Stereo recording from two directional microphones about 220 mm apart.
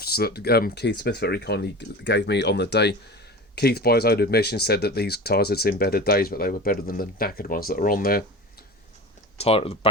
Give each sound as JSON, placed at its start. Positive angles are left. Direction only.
{"t": 0.0, "sound": "speech", "side_deg": 45}
{"t": 9.4, "sound": "speech", "side_deg": 25}